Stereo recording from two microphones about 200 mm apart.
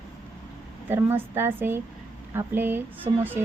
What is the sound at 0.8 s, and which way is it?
A woman's voice, 10° right (ahead or behind).